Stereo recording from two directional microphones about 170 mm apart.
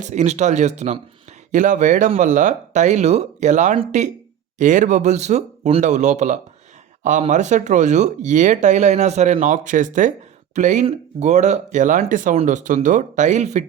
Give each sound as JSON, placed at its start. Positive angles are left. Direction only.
{"t": 0.0, "sound": "speech", "side_deg": -45}